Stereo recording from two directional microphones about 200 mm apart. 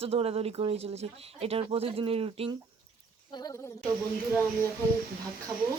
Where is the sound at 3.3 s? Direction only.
20° left (ahead or behind).